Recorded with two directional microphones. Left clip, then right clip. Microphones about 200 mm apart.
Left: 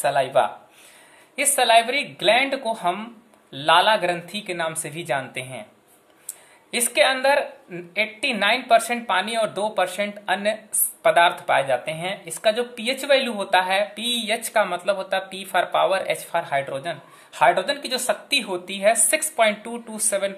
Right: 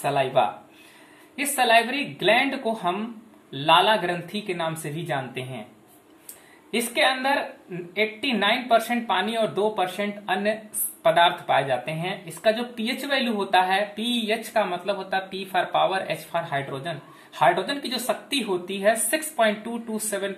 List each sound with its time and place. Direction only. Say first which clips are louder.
0.0 s speech: left 2 dB; 50° left (ahead or behind)
6.7 s speech: left 3 dB; 50° left (ahead or behind)